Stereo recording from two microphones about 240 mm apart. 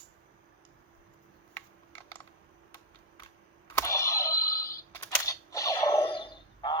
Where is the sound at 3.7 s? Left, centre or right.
Centre.